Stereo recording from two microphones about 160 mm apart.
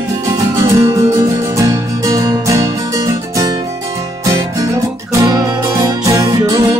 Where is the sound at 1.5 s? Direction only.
20° right (ahead or behind).